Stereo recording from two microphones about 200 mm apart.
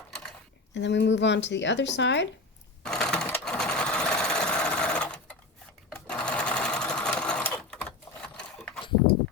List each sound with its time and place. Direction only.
0.7 s speech: 60° left (ahead or behind)
2.8 s sewing machine: 5° left (ahead or behind)